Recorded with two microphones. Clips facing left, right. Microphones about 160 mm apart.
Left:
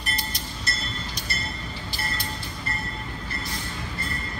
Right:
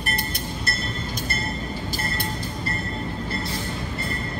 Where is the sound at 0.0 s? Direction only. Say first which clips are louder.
Right 5 dB; 55° right (ahead or behind).